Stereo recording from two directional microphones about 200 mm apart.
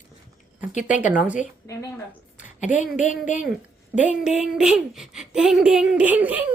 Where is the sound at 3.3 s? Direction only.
40° left (ahead or behind).